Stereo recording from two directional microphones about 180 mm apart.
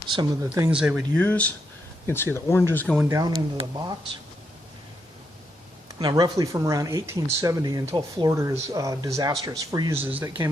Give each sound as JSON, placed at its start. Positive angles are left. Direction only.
{"t": 0.2, "sound": "speech", "side_deg": -15}
{"t": 0.7, "sound": "speech", "side_deg": -5}
{"t": 3.0, "sound": "speech", "side_deg": -15}
{"t": 6.0, "sound": "speech", "side_deg": -20}
{"t": 10.0, "sound": "speech", "side_deg": -10}
{"t": 10.2, "sound": "speech", "side_deg": -25}